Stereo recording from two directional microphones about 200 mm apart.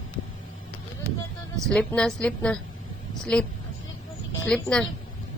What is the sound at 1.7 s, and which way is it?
Speech, 5° left (ahead or behind).